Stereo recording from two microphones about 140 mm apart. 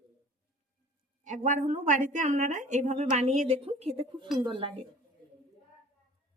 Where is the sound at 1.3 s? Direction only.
60° right (ahead or behind); by 4.8 s 40° right (ahead or behind).